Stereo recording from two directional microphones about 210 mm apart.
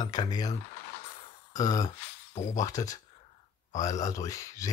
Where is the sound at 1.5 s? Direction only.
15° left (ahead or behind).